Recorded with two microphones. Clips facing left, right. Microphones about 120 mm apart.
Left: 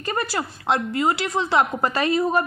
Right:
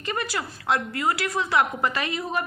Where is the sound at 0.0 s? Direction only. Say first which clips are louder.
Left 3 dB; 40° left (ahead or behind).